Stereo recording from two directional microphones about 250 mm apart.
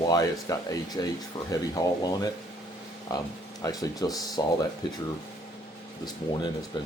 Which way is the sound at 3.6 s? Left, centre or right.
Centre.